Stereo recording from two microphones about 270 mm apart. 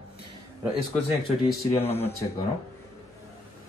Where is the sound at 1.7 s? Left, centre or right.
Left.